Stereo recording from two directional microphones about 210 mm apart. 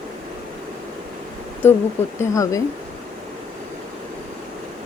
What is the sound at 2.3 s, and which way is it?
Speech, 15° left (ahead or behind).